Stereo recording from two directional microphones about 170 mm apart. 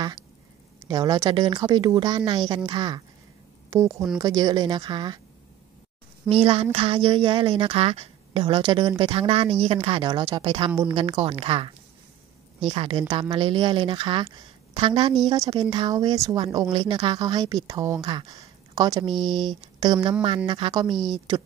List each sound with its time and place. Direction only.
0.7 s speech: 20° right (ahead or behind)
6.2 s a woman's voice: 35° right (ahead or behind)
20.9 s a woman's voice: centre (ahead or behind)